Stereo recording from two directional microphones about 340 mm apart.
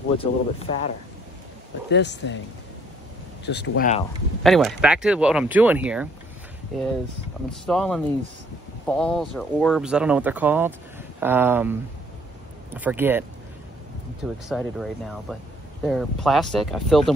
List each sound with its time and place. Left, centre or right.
0.2 s speech: centre
1.9 s speech: left
3.4 s speech: left
4.4 s speech: centre
14.2 s speech: centre